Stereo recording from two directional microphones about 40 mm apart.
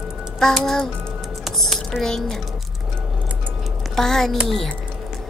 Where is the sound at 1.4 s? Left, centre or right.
Centre.